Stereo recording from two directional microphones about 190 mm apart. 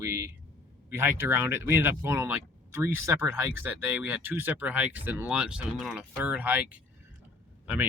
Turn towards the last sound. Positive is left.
turn(degrees=-5)  # may be behind; listen again after turning